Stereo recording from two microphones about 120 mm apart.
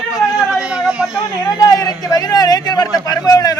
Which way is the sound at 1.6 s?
30° left (ahead or behind).